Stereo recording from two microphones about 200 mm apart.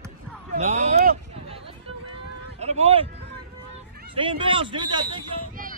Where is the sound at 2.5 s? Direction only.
30° right (ahead or behind).